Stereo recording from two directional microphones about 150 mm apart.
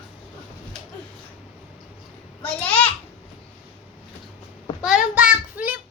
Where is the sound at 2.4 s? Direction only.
10° left (ahead or behind).